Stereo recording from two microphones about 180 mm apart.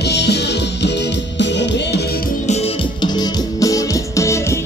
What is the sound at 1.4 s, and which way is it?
Music, 75° left (ahead or behind).